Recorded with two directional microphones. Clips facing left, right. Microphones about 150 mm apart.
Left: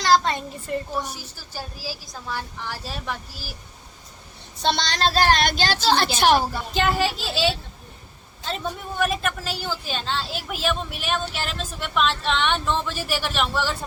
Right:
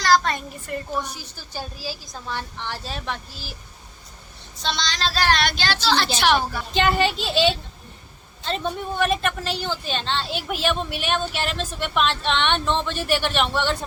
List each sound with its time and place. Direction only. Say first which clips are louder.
0.0 s a child's voice: even; 20° left (ahead or behind)
1.0 s a woman's voice: left 1 dB; 5° left (ahead or behind)
4.6 s speech: left 4 dB; 60° left (ahead or behind)
6.7 s a woman's voice: right 2 dB; 5° left (ahead or behind)